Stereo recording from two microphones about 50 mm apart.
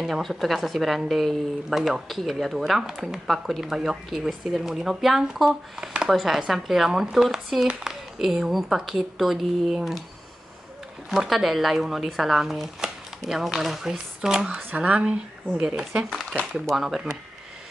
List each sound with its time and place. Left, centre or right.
0.1 s speech: centre
11.1 s speech: centre
14.8 s speech: right
16.7 s speech: centre